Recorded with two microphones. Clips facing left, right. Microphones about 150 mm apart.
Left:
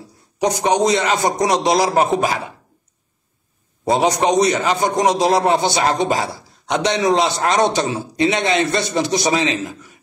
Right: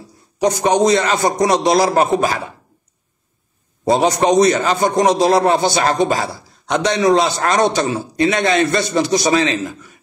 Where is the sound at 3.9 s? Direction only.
15° left (ahead or behind).